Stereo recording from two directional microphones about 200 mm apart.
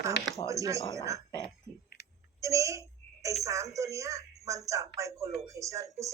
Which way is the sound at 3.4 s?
15° right (ahead or behind).